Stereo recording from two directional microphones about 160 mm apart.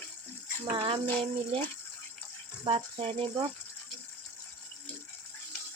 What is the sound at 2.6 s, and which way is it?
Speech, 40° right (ahead or behind).